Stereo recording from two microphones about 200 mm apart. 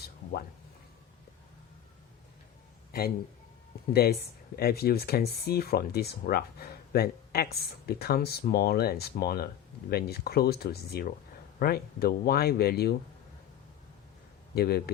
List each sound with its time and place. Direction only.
3.9 s speech: 50° left (ahead or behind)
14.5 s speech: 50° left (ahead or behind)